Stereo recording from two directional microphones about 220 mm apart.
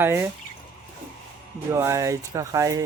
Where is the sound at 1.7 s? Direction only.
10° right (ahead or behind).